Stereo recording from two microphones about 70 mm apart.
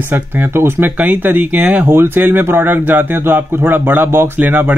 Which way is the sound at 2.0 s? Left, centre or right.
Right.